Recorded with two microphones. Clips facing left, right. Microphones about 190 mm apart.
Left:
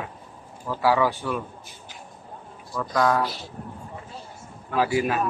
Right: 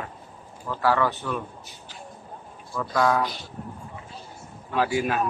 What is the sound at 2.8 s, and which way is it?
Speech, centre (ahead or behind).